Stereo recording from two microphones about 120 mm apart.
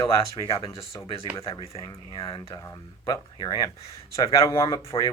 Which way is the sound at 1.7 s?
25° left (ahead or behind).